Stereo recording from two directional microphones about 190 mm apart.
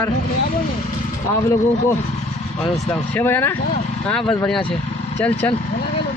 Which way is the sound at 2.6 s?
10° left (ahead or behind).